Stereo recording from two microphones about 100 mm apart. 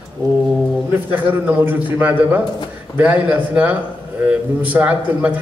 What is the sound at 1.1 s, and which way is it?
A man's voice, 15° right (ahead or behind).